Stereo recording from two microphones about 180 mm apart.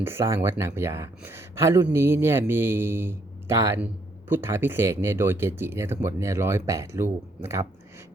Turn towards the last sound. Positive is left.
turn(degrees=-15)  # may be behind; listen again after turning